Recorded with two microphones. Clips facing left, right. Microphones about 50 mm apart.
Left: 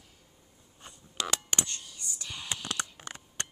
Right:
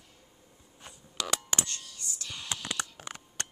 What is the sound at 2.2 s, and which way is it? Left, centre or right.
Whispering, centre.